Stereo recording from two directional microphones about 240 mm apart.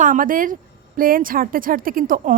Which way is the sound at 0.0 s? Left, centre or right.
Right.